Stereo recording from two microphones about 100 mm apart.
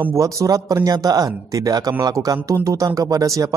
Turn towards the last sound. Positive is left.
turn(degrees=-35)  # may be behind; listen again after turning